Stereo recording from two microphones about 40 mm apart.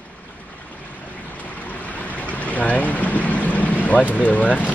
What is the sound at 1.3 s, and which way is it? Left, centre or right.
Boat, left.